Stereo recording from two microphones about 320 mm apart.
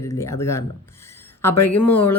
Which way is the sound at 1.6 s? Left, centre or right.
Centre.